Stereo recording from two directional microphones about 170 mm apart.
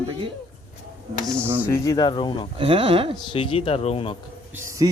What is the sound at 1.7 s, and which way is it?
Speech, 20° left (ahead or behind).